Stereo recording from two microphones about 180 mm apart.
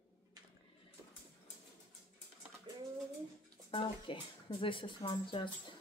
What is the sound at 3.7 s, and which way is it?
Speech, 30° left (ahead or behind).